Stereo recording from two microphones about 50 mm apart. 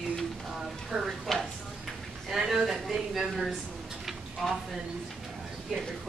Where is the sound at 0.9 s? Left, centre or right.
Right.